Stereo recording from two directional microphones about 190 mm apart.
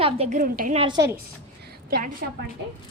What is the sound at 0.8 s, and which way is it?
Speech, 25° right (ahead or behind).